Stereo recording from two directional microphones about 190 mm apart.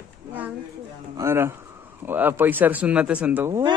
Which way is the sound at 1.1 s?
15° right (ahead or behind).